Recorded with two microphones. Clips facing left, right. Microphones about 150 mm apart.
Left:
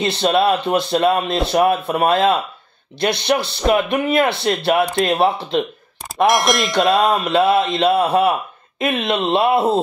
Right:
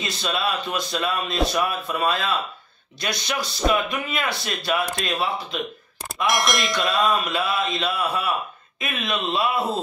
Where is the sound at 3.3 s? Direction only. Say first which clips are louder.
Left 5 dB; 65° left (ahead or behind).